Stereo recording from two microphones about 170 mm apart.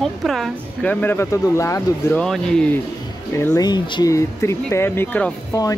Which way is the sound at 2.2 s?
5° left (ahead or behind).